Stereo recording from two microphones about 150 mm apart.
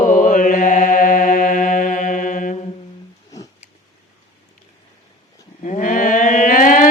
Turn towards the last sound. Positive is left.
turn(degrees=60)  # may be behind; listen again after turning